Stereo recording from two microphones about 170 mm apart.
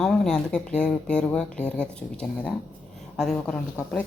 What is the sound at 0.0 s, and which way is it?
A woman's voice, centre (ahead or behind).